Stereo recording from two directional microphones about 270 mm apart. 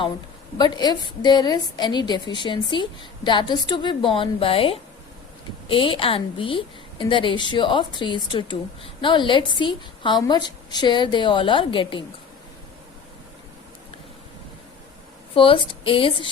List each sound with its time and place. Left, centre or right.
0.6 s a woman's voice: centre
15.4 s a woman's voice: centre